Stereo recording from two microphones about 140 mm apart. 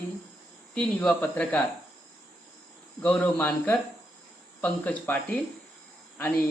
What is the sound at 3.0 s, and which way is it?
Speech, 10° left (ahead or behind).